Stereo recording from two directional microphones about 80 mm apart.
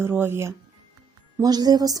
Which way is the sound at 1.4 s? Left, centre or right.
Right.